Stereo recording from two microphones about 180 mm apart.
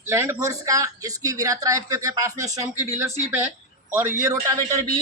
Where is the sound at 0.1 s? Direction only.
15° right (ahead or behind).